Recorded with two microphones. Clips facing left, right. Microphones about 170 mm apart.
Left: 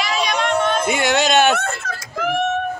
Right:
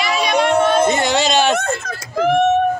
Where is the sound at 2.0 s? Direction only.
25° right (ahead or behind).